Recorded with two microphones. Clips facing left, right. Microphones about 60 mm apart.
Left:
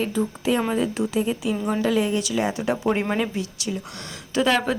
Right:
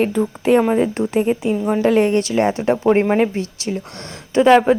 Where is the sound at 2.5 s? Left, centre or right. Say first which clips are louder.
Right 8 dB; right.